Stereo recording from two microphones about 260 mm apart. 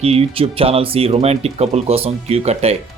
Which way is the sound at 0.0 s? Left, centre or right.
Right.